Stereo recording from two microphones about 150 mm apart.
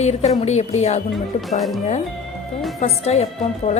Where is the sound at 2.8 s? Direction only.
45° left (ahead or behind).